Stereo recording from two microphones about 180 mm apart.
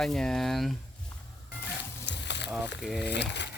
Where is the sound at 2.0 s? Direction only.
75° left (ahead or behind).